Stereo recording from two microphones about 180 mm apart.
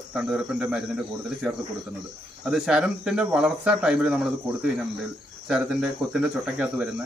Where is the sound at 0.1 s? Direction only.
5° right (ahead or behind).